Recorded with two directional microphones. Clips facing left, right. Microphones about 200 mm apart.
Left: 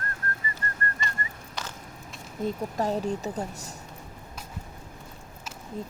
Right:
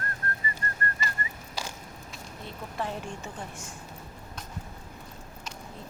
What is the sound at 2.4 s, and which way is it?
Speech, 40° left (ahead or behind).